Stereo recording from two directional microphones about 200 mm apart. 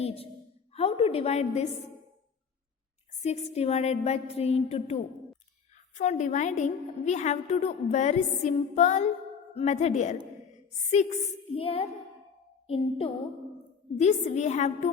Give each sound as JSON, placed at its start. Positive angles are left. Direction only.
{"t": 0.7, "sound": "a woman's voice", "side_deg": 30}
{"t": 3.2, "sound": "a woman's voice", "side_deg": 35}
{"t": 11.4, "sound": "a woman's voice", "side_deg": 30}